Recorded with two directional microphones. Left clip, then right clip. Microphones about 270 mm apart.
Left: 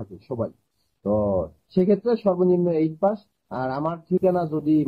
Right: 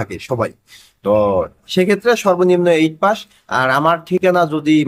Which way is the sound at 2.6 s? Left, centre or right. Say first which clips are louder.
Right 8 dB; right.